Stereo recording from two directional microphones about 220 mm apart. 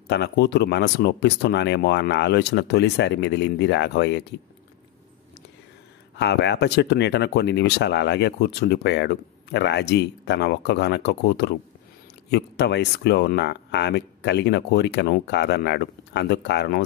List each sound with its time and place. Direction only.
0.1 s speech: 50° left (ahead or behind)
6.1 s speech: 50° left (ahead or behind)